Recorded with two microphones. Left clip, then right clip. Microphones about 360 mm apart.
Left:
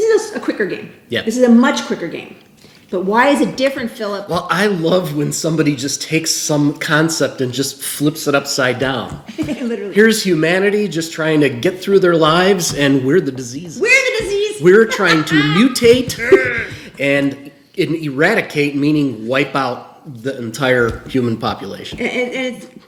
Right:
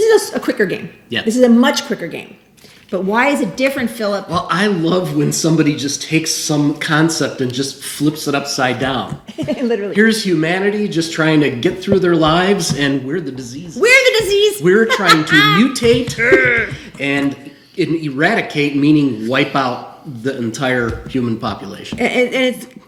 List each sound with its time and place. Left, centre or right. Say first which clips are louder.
0.0 s a sound: right 2 dB; right
1.1 s speech: even; centre
1.9 s a woman's voice: even; right
2.9 s a woman's voice: left 2 dB; right
4.3 s speech: left 4 dB; centre
13.7 s a sound: right 3 dB; right
14.6 s speech: left 2 dB; centre
15.3 s a woman's voice: right 5 dB; right
15.5 s speech: left 2 dB; centre
16.2 s speech: right 3 dB; right
17.0 s speech: left 2 dB; centre
21.9 s a woman's voice: right 5 dB; right